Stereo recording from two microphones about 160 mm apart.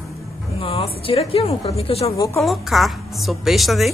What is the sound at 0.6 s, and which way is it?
A woman's voice, 35° left (ahead or behind).